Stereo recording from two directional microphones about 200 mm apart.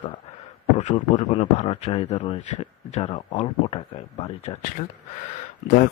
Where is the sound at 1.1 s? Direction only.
35° left (ahead or behind).